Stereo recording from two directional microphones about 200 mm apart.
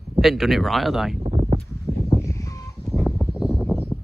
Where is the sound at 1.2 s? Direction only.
30° right (ahead or behind).